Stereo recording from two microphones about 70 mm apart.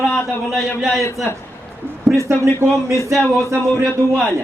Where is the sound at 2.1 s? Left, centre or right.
Right.